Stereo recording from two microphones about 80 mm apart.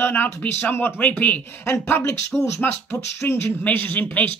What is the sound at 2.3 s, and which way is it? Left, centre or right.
Speech, centre.